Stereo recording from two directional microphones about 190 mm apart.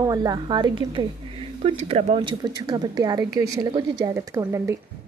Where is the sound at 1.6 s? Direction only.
35° right (ahead or behind); by 4.7 s 15° right (ahead or behind).